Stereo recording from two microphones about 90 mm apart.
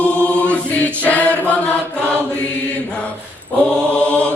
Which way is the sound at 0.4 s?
15° left (ahead or behind).